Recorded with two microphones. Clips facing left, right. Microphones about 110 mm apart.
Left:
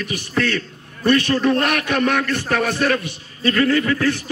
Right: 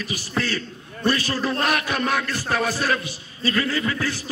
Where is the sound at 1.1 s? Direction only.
65° left (ahead or behind).